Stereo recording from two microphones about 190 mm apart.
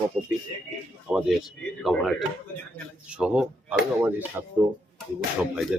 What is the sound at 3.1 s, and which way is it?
Speech, 5° right (ahead or behind).